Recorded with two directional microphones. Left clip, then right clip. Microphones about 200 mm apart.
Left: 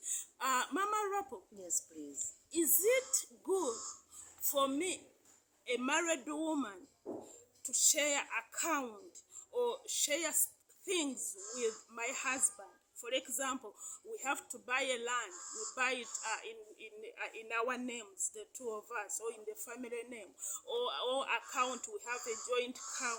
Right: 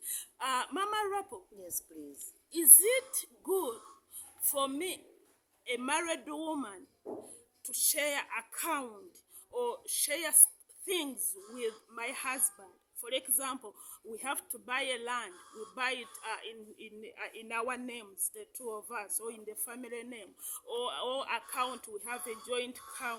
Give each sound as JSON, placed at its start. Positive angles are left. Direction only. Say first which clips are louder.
{"t": 0.0, "sound": "a sound", "louder": "even", "side_deg": -20}
{"t": 1.5, "sound": "a woman's voice", "louder": "left 6 dB", "side_deg": 10}
{"t": 2.1, "sound": "speech", "louder": "left 1 dB", "side_deg": -20}
{"t": 7.1, "sound": "dog", "louder": "right 2 dB", "side_deg": -55}
{"t": 7.6, "sound": "a woman's voice", "louder": "left 1 dB", "side_deg": -20}